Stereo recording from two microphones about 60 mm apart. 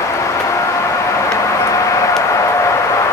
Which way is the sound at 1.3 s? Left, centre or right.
Left.